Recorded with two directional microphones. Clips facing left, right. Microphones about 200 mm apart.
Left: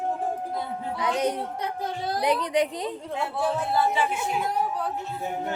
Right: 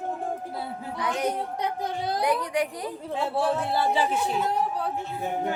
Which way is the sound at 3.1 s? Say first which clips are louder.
Right 2 dB; 30° right (ahead or behind).